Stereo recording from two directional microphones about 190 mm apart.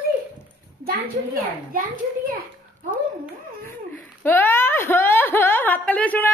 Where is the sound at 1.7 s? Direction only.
45° right (ahead or behind).